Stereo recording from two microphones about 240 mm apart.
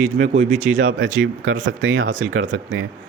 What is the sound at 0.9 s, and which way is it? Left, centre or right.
A man's voice, right.